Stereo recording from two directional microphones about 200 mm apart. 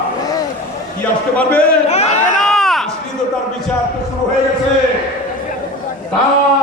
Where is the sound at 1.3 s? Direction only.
5° left (ahead or behind).